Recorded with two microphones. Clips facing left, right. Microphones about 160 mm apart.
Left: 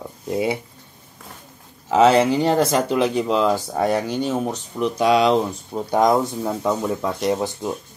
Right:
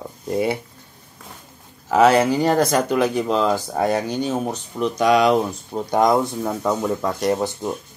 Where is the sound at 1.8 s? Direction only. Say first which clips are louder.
Even; 20° left (ahead or behind).